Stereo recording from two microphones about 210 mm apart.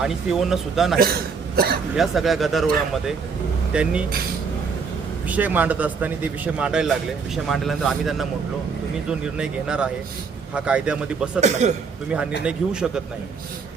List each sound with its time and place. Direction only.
0.0 s speech: centre (ahead or behind)
1.5 s speech: 45° right (ahead or behind)
2.0 s speech: centre (ahead or behind)
5.3 s a man's voice: 5° right (ahead or behind)
11.3 s a man's voice: 35° right (ahead or behind)
12.5 s speech: 5° right (ahead or behind)